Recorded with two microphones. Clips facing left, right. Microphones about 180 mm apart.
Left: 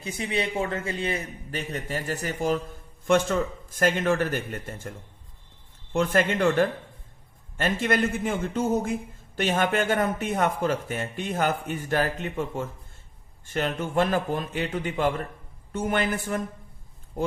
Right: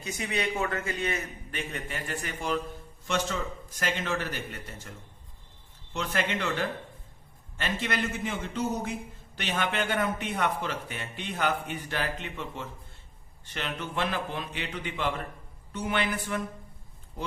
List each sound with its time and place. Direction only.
0.0 s a man's voice: 30° left (ahead or behind)
3.1 s a man's voice: 50° left (ahead or behind)